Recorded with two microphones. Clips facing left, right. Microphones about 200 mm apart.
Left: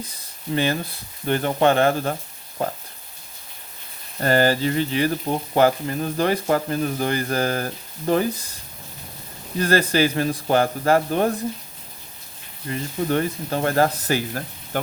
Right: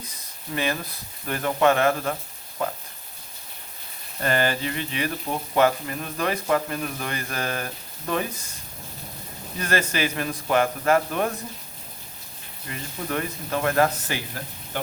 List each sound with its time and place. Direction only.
0.1 s speech: 30° left (ahead or behind)
4.2 s speech: 35° left (ahead or behind)
9.6 s speech: 35° left (ahead or behind)
12.6 s speech: 35° left (ahead or behind)